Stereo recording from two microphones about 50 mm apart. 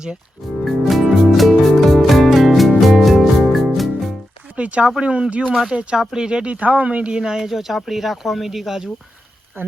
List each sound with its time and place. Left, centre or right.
0.6 s music: centre
4.5 s speech: right
6.0 s speech: centre
6.2 s speech: right
7.2 s speech: centre
9.6 s speech: right